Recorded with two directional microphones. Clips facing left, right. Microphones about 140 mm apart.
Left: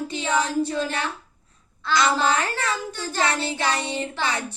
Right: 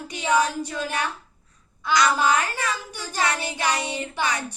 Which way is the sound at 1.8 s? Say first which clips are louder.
Right 1 dB; 15° right (ahead or behind).